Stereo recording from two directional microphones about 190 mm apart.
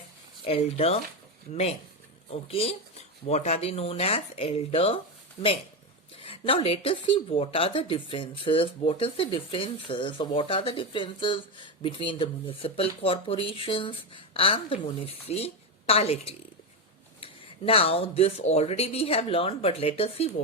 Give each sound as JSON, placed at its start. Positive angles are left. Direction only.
{"t": 0.4, "sound": "speech", "side_deg": 30}
{"t": 2.3, "sound": "speech", "side_deg": 30}
{"t": 6.1, "sound": "a woman's voice", "side_deg": 30}